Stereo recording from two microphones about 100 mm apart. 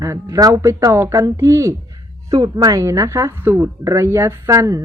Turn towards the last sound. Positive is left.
turn(degrees=-30)  # may be behind; listen again after turning